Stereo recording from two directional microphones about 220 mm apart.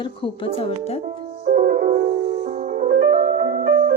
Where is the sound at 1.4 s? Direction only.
40° right (ahead or behind).